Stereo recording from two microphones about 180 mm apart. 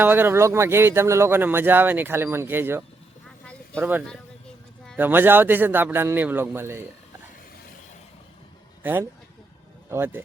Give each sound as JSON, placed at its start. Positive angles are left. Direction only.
{"t": 0.0, "sound": "speech", "side_deg": -10}
{"t": 8.8, "sound": "speech", "side_deg": -10}